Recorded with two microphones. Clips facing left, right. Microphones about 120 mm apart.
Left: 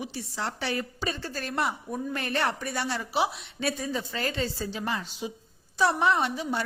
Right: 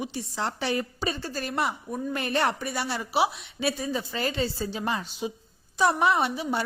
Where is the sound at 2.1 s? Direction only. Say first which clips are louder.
Right 3 dB; 15° right (ahead or behind).